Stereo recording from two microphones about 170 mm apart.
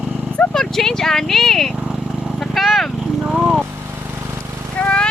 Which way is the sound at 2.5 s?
Centre (ahead or behind).